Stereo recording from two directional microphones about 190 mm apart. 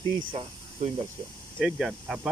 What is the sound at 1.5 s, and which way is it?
Speech, centre (ahead or behind).